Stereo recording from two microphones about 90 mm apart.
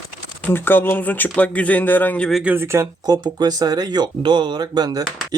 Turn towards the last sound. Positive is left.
turn(degrees=-45)  # may be behind; listen again after turning